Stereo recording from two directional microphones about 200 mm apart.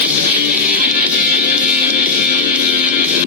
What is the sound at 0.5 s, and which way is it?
Music, 45° right (ahead or behind).